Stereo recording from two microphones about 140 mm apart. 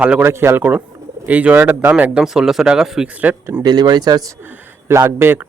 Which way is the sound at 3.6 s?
30° right (ahead or behind).